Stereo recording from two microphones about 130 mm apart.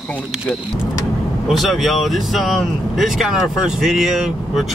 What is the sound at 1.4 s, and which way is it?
Speech, centre (ahead or behind).